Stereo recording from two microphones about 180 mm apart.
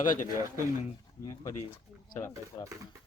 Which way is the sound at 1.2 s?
20° left (ahead or behind).